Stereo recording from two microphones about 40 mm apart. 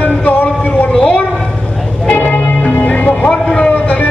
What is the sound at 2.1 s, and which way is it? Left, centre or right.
Music, left.